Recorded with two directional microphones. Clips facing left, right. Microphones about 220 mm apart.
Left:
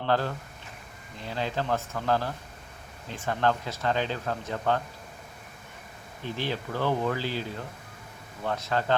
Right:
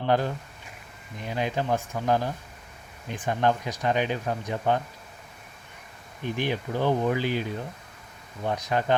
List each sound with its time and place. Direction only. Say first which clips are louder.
0.0 s speech: right 2 dB; 15° right (ahead or behind)
6.2 s speech: right 3 dB; 15° right (ahead or behind)